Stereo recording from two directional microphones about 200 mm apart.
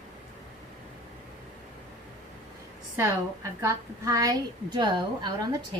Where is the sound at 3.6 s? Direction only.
15° right (ahead or behind).